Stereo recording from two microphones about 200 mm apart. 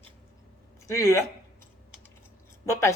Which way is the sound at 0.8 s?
15° left (ahead or behind).